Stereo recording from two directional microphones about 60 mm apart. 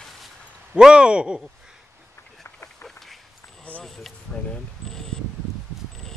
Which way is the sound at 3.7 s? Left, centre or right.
Left.